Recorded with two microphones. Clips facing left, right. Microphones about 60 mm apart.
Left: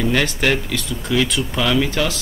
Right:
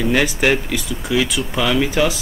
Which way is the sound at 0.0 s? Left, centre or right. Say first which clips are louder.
Right 2 dB; centre.